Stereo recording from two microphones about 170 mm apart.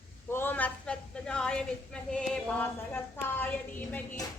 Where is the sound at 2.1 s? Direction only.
5° left (ahead or behind).